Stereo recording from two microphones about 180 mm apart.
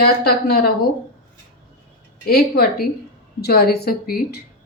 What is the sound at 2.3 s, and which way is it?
Speech, 60° left (ahead or behind).